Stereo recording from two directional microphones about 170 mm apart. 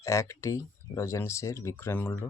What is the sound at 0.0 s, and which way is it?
Speech, 20° left (ahead or behind).